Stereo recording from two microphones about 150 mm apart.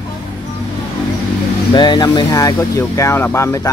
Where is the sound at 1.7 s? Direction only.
30° left (ahead or behind).